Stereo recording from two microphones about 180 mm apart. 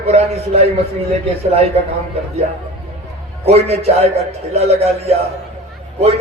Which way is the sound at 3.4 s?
35° right (ahead or behind).